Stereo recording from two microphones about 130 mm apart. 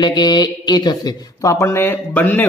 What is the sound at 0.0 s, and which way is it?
A man's voice, 35° left (ahead or behind).